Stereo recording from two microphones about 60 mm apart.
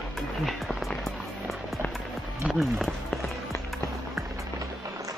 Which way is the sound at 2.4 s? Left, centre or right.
Right.